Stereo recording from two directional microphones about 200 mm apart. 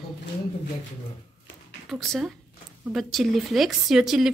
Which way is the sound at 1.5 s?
65° left (ahead or behind).